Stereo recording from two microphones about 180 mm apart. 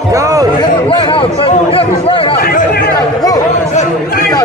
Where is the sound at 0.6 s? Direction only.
30° left (ahead or behind).